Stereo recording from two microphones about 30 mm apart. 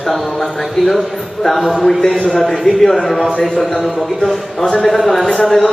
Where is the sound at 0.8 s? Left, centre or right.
Centre.